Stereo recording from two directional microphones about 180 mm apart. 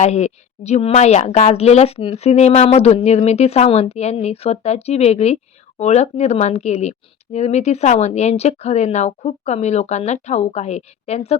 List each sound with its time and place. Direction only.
0.0 s a woman's voice: 40° left (ahead or behind)